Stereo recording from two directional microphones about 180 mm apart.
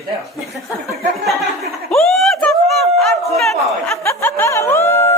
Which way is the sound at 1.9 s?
Centre (ahead or behind).